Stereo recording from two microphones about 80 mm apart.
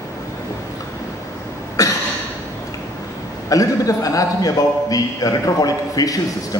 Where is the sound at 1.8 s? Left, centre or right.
Left.